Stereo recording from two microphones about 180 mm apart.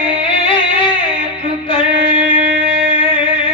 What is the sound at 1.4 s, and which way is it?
Music, 30° left (ahead or behind).